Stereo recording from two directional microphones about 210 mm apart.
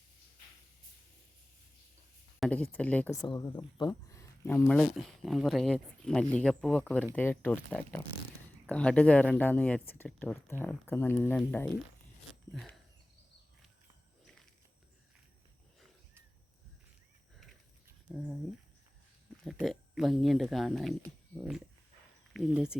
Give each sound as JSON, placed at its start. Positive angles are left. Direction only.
{"t": 2.4, "sound": "speech", "side_deg": 5}
{"t": 3.2, "sound": "speech", "side_deg": 15}
{"t": 17.8, "sound": "a sound", "side_deg": -5}
{"t": 19.5, "sound": "speech", "side_deg": 0}